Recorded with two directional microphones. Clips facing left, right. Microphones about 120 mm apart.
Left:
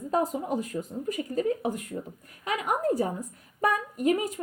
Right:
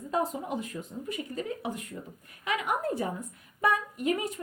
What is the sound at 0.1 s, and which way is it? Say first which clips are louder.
Speech: left 3 dB; 40° left (ahead or behind).